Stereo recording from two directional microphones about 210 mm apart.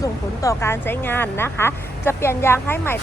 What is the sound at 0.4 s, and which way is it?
A woman's voice, 10° left (ahead or behind).